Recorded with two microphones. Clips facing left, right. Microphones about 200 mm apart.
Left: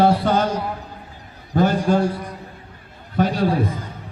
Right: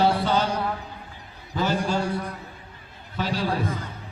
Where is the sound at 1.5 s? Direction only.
55° left (ahead or behind).